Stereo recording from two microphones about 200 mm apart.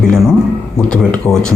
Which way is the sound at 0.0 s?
Centre (ahead or behind).